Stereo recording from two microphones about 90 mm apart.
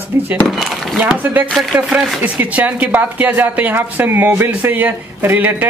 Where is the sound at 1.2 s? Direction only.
20° right (ahead or behind).